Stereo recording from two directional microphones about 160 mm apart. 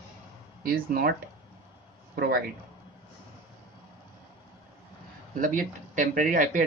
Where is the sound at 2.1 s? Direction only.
70° right (ahead or behind).